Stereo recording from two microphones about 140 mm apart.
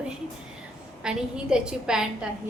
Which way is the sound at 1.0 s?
5° right (ahead or behind).